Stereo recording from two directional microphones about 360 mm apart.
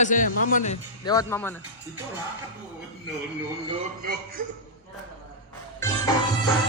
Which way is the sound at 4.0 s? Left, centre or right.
Right.